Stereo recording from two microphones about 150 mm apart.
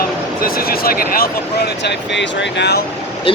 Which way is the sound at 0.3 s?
75° left (ahead or behind).